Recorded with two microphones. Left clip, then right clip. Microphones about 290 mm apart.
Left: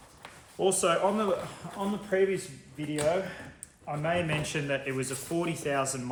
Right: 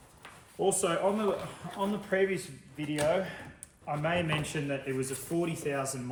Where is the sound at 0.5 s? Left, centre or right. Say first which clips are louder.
Left 3 dB; centre.